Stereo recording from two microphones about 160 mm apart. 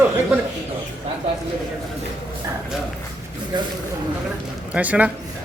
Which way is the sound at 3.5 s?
25° right (ahead or behind).